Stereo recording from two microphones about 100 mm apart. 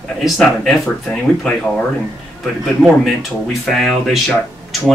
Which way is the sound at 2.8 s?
Centre (ahead or behind).